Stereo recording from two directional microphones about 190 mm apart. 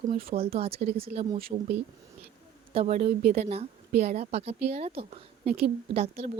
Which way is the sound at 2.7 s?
35° right (ahead or behind).